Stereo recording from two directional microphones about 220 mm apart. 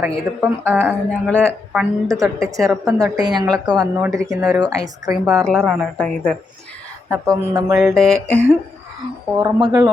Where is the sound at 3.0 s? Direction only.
15° right (ahead or behind).